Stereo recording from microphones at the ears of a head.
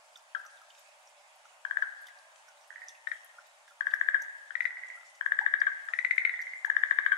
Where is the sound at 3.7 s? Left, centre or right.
Left.